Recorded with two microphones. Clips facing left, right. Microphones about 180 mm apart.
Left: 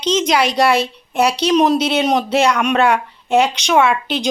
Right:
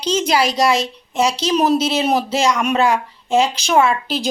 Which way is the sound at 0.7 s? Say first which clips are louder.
Left 2 dB; 60° left (ahead or behind).